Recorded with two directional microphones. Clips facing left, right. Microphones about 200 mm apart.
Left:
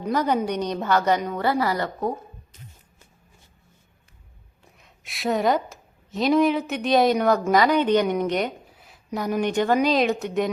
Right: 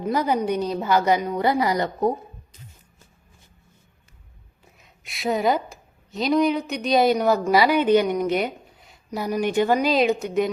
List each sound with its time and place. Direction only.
0.0 s a woman's voice: 10° right (ahead or behind)
4.8 s a woman's voice: centre (ahead or behind)